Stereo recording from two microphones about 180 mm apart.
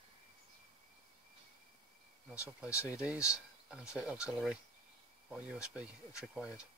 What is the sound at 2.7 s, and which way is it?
Speech, 15° left (ahead or behind).